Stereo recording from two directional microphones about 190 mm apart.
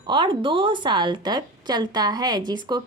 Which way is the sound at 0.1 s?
25° right (ahead or behind).